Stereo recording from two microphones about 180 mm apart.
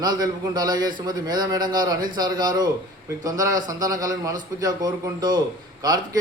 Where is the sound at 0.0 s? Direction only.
20° right (ahead or behind).